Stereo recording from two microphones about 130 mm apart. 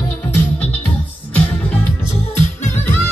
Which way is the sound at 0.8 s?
15° left (ahead or behind).